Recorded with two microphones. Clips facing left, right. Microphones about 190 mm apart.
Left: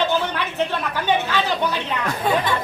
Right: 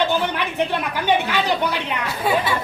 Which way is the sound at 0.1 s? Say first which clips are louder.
Right 1 dB; 15° right (ahead or behind).